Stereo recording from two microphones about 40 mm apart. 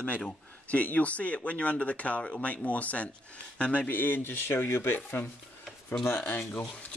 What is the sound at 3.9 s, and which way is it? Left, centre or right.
Speech, left.